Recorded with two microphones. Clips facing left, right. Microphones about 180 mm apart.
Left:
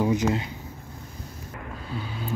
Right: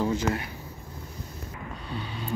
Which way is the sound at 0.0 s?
15° left (ahead or behind).